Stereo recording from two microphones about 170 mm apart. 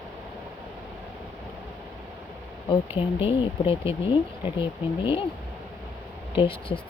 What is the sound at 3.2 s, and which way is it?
Speech, 35° left (ahead or behind).